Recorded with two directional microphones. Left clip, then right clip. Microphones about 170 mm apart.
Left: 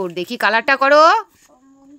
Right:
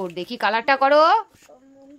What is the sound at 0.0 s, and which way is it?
A woman's voice, 20° left (ahead or behind).